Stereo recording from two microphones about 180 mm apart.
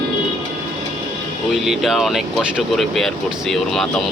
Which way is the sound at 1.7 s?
Centre (ahead or behind).